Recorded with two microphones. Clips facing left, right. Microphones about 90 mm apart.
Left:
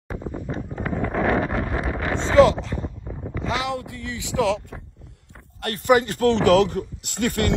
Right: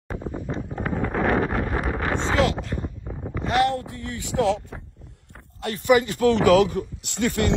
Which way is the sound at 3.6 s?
75° left (ahead or behind).